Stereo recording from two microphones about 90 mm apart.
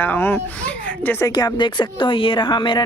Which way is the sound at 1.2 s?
45° left (ahead or behind).